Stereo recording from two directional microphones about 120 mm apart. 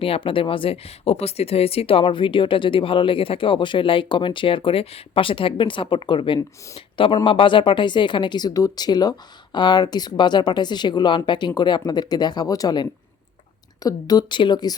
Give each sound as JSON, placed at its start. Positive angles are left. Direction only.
{"t": 0.0, "sound": "speech", "side_deg": 50}